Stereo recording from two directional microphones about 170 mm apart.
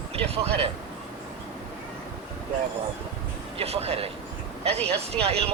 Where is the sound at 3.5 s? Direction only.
35° right (ahead or behind).